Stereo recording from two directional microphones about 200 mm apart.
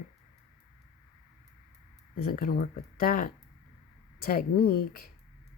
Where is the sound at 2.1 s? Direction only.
45° left (ahead or behind).